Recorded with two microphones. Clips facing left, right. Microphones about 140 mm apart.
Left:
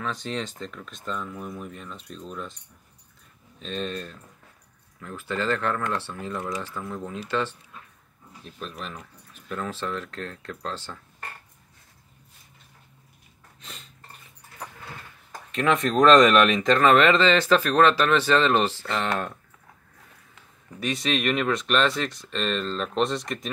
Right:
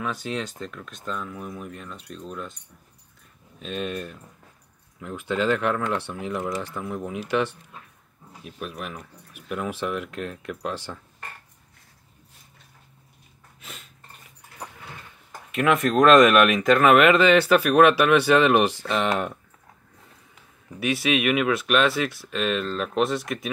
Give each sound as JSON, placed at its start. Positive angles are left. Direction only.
{"t": 0.0, "sound": "speech", "side_deg": -5}
{"t": 3.5, "sound": "speech", "side_deg": -5}
{"t": 13.6, "sound": "a sound", "side_deg": 0}
{"t": 15.5, "sound": "speech", "side_deg": -5}
{"t": 20.8, "sound": "speech", "side_deg": -5}